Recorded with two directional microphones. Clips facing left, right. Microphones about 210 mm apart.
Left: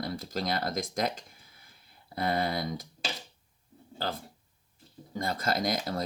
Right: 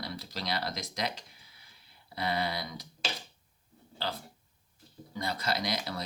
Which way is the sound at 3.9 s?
50° left (ahead or behind).